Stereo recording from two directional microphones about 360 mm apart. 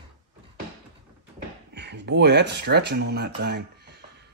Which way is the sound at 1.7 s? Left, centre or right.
Right.